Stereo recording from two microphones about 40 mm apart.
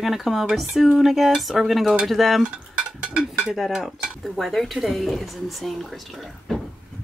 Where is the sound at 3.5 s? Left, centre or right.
Centre.